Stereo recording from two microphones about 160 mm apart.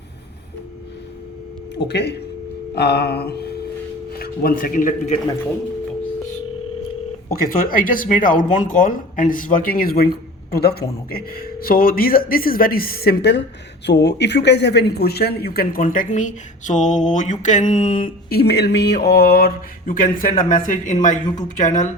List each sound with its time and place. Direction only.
1.8 s a sound: 90° left
4.2 s speech: 65° left (ahead or behind)
7.4 s speech: 60° left (ahead or behind); by 10.8 s 80° left
11.1 s speech: 70° left (ahead or behind); by 21.8 s 50° left (ahead or behind)